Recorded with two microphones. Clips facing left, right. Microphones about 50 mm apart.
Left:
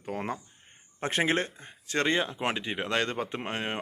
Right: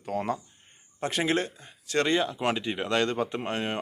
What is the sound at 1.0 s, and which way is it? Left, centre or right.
Speech, left.